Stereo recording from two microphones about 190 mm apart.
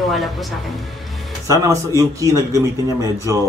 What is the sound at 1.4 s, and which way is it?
Speech, 15° right (ahead or behind).